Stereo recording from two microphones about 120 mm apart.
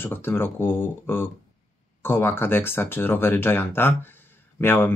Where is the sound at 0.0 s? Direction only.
20° left (ahead or behind).